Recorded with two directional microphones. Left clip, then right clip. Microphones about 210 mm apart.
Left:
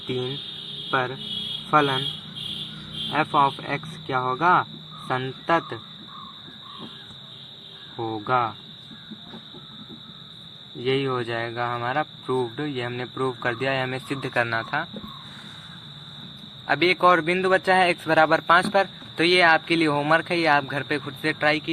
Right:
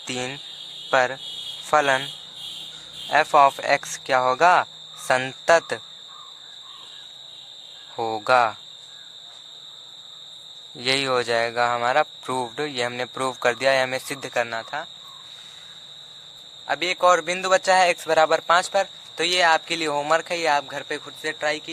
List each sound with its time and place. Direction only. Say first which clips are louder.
0.9 s speech: right 5 dB; 65° right (ahead or behind)
3.1 s speech: right 5 dB; 60° right (ahead or behind)
7.9 s speech: right 5 dB; 55° right (ahead or behind)
10.8 s speech: right 3 dB; 55° right (ahead or behind); by 14.8 s 25° right (ahead or behind)
16.6 s a man's voice: left 1 dB; 25° right (ahead or behind)